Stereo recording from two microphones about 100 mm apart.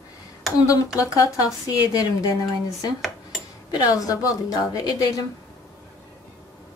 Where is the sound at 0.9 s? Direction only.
35° left (ahead or behind).